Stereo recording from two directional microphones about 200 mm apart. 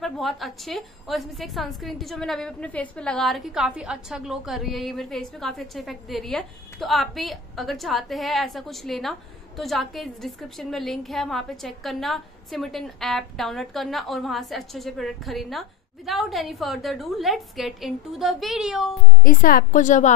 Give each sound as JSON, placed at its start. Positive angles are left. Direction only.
{"t": 0.0, "sound": "a woman's voice", "side_deg": 0}
{"t": 19.2, "sound": "a woman's voice", "side_deg": 45}